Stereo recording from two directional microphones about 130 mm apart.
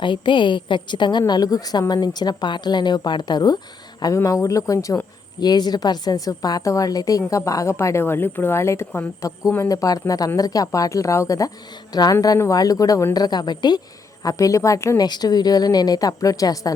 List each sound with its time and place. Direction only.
0.0 s a woman's voice: 40° left (ahead or behind)